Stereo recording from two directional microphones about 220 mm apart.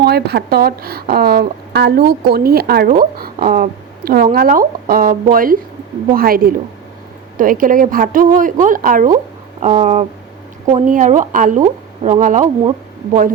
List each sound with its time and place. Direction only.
0.0 s speech: 45° right (ahead or behind)